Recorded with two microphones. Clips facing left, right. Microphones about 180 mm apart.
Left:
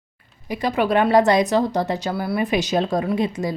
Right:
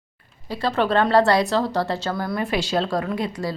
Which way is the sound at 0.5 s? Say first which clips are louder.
Left 1 dB; 15° left (ahead or behind).